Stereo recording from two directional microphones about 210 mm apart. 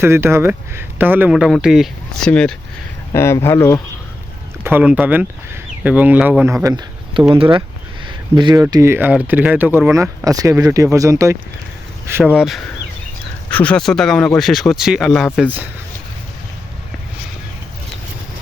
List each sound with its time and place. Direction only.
0.0 s speech: 10° right (ahead or behind); by 2.6 s 5° left (ahead or behind)
3.1 s speech: 15° left (ahead or behind)
4.6 s speech: 5° right (ahead or behind); by 7.6 s 25° right (ahead or behind)
8.0 s a sound: 20° right (ahead or behind)
8.6 s speech: 10° right (ahead or behind)